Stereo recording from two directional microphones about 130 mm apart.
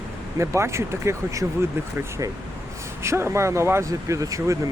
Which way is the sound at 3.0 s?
20° right (ahead or behind).